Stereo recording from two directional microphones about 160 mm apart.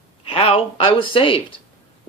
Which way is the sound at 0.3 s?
35° left (ahead or behind).